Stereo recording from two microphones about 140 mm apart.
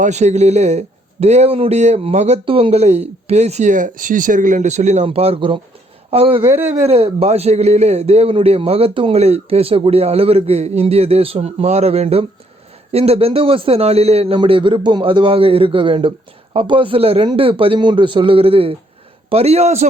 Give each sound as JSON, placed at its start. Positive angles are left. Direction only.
{"t": 0.0, "sound": "a man's voice", "side_deg": -55}
{"t": 5.0, "sound": "a man's voice", "side_deg": -45}
{"t": 6.5, "sound": "a man's voice", "side_deg": -10}
{"t": 6.8, "sound": "a man's voice", "side_deg": -45}